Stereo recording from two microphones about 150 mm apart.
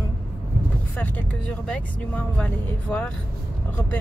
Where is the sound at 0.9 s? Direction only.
10° left (ahead or behind).